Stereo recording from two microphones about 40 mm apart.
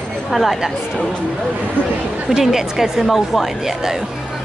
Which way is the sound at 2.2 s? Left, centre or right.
Centre.